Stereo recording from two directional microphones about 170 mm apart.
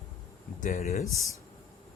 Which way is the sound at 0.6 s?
45° left (ahead or behind).